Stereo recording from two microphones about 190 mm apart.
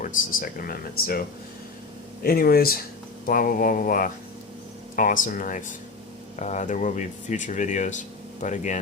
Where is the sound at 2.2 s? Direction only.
50° left (ahead or behind).